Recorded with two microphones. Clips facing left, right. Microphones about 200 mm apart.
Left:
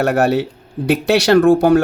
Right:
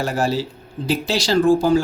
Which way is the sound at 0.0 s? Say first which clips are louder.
Left 6 dB; 65° left (ahead or behind).